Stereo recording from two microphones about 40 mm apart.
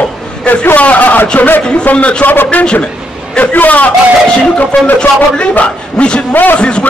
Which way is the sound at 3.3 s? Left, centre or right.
Left.